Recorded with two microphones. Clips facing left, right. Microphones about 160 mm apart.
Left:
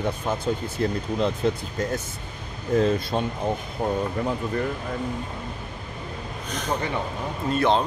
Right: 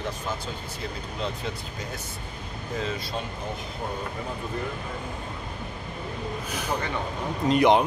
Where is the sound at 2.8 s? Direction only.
45° left (ahead or behind).